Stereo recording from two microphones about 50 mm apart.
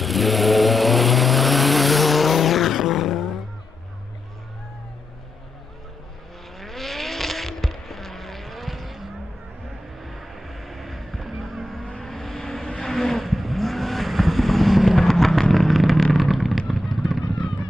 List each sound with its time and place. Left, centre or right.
0.0 s vehicle: centre
6.6 s vehicle: centre